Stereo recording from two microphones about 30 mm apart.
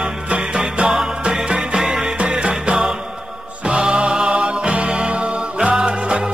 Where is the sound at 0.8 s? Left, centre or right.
Right.